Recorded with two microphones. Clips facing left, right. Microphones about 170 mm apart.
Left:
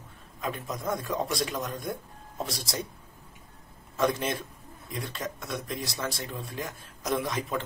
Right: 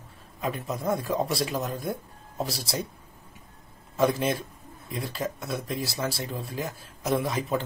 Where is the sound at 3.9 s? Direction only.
Centre (ahead or behind).